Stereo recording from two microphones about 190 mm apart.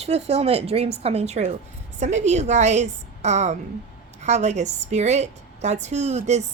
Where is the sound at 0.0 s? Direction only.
35° right (ahead or behind).